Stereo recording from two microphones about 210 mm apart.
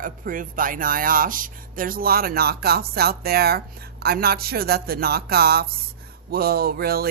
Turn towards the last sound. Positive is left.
turn(degrees=-45)  # may be behind; listen again after turning